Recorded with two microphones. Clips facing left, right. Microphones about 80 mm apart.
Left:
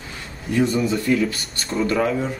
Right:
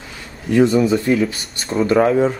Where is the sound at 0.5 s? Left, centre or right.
Right.